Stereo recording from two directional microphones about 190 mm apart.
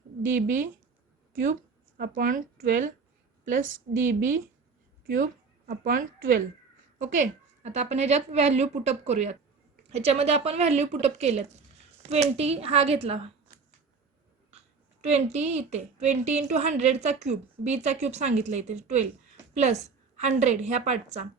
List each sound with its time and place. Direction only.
0.3 s a woman's voice: 45° right (ahead or behind)
2.0 s a woman's voice: 45° right (ahead or behind)
15.1 s a woman's voice: 35° right (ahead or behind)
20.1 s a woman's voice: 35° right (ahead or behind)